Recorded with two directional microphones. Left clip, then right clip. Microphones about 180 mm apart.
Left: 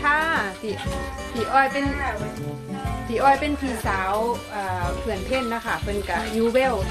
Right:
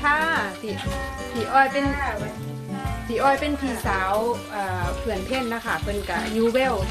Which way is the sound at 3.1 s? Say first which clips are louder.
Left 2 dB; 20° left (ahead or behind).